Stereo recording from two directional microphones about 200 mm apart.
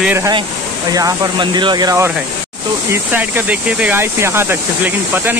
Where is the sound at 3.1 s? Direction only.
10° right (ahead or behind).